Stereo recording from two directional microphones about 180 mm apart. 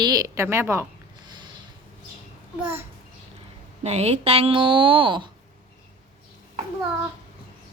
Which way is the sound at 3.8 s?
35° right (ahead or behind).